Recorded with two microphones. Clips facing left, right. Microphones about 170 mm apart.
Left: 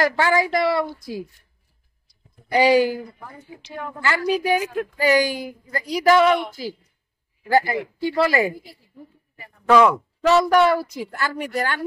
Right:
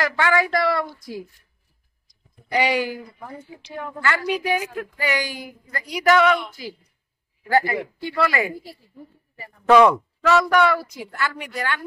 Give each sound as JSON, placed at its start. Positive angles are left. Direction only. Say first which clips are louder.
{"t": 0.0, "sound": "a woman's voice", "louder": "left 2 dB", "side_deg": 30}
{"t": 2.5, "sound": "a woman's voice", "louder": "left 6 dB", "side_deg": 35}
{"t": 4.0, "sound": "a woman's voice", "louder": "left 2 dB", "side_deg": 30}
{"t": 7.5, "sound": "a woman's voice", "louder": "left 1 dB", "side_deg": 35}
{"t": 10.2, "sound": "a woman's voice", "louder": "left 2 dB", "side_deg": 35}